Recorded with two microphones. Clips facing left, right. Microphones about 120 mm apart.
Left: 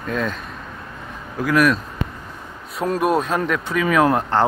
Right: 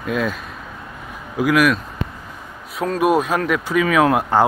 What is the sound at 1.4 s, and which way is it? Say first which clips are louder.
Speech: right 1 dB; 5° right (ahead or behind).